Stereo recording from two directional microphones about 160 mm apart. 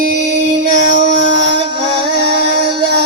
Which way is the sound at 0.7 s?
50° right (ahead or behind).